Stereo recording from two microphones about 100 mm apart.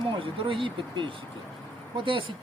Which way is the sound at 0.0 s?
60° right (ahead or behind).